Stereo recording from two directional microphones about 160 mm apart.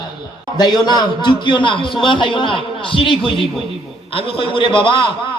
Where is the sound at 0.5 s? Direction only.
25° left (ahead or behind).